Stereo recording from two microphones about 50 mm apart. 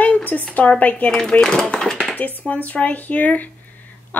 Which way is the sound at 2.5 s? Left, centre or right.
Left.